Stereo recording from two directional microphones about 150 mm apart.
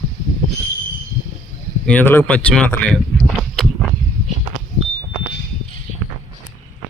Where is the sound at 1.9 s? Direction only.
10° left (ahead or behind).